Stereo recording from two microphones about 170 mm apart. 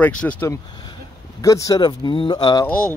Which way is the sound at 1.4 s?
20° left (ahead or behind).